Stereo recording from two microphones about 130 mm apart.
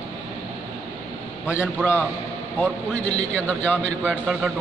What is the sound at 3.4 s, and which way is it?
Speech, 10° left (ahead or behind).